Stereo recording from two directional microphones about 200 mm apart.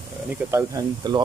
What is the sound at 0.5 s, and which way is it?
Speech, 20° right (ahead or behind).